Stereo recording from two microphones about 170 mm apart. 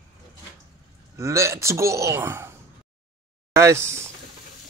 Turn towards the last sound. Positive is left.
turn(degrees=-15)  # may be behind; listen again after turning